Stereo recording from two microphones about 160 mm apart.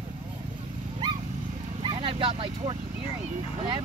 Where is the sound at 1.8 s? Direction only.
35° right (ahead or behind).